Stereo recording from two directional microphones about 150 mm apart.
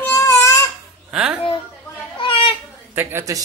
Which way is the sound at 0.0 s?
15° left (ahead or behind).